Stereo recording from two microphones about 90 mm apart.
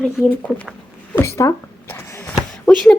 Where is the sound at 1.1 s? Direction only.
30° left (ahead or behind).